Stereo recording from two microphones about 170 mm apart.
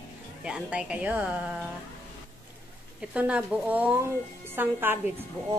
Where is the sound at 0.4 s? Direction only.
5° right (ahead or behind).